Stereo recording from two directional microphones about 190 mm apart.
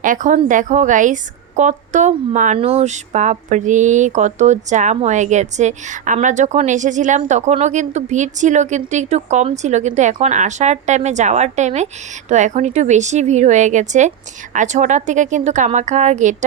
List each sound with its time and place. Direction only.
0.0 s a woman's voice: 45° right (ahead or behind)